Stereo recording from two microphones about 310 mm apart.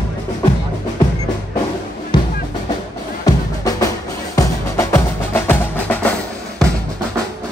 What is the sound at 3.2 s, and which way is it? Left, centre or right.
Music, centre.